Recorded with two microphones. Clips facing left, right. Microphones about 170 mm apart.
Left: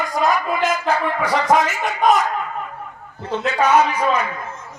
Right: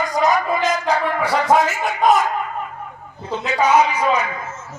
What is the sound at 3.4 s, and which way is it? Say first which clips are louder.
Speech: even; 10° right (ahead or behind).